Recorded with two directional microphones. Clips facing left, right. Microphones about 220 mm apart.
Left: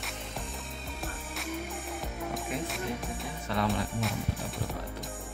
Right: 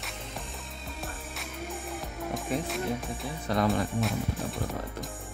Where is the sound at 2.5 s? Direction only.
35° right (ahead or behind).